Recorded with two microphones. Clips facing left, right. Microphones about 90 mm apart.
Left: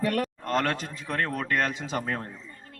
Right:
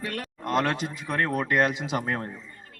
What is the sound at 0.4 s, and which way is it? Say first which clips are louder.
A man's voice: right 7 dB; 10° right (ahead or behind).